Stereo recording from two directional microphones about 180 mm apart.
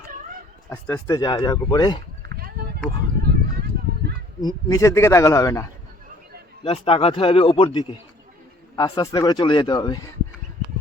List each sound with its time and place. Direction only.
0.7 s a man's voice: 15° left (ahead or behind)
2.2 s a sound: 60° right (ahead or behind)
4.4 s a man's voice: 20° left (ahead or behind)
6.7 s a man's voice: 30° left (ahead or behind)